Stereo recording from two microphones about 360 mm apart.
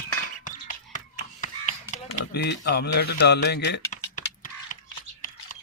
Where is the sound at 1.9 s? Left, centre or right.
Left.